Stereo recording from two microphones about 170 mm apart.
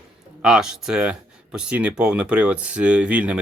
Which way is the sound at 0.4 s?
5° right (ahead or behind).